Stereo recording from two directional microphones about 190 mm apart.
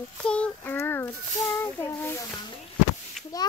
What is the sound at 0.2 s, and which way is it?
A child's voice, 5° left (ahead or behind).